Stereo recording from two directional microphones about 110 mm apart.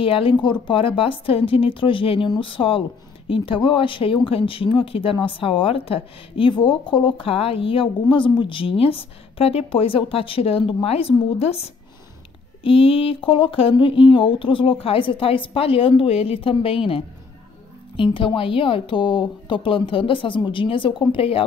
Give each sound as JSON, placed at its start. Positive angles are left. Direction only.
{"t": 0.0, "sound": "speech", "side_deg": 55}
{"t": 12.6, "sound": "speech", "side_deg": 60}